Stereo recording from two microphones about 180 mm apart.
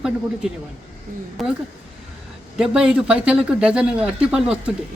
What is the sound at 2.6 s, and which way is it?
Speech, 5° right (ahead or behind).